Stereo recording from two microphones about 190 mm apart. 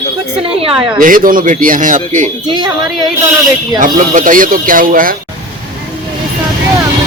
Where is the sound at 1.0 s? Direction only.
45° right (ahead or behind).